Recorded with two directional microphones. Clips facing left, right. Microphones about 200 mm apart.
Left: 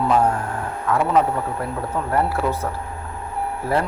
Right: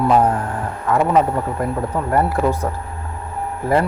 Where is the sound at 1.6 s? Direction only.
15° right (ahead or behind).